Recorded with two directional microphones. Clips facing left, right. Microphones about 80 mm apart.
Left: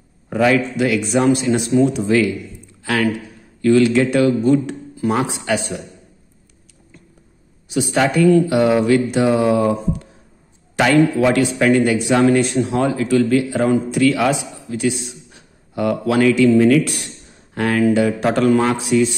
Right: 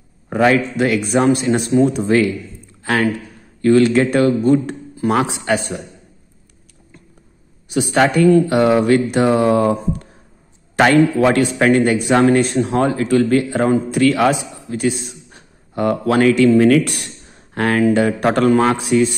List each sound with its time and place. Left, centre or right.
0.3 s a man's voice: right
7.6 s a man's voice: right
16.3 s a man's voice: right